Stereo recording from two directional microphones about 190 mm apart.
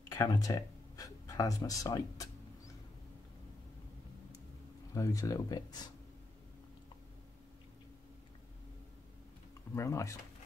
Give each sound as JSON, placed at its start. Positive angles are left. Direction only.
{"t": 0.1, "sound": "speech", "side_deg": 20}
{"t": 4.9, "sound": "speech", "side_deg": 15}
{"t": 9.8, "sound": "speech", "side_deg": 15}